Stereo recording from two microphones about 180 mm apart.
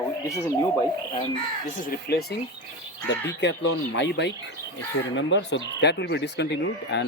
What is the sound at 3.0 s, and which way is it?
Speech, 75° left (ahead or behind).